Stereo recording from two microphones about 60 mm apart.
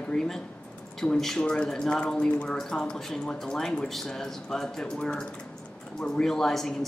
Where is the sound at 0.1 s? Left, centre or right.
Centre.